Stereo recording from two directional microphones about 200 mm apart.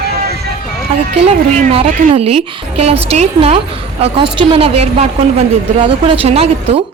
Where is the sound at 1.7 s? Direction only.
30° right (ahead or behind).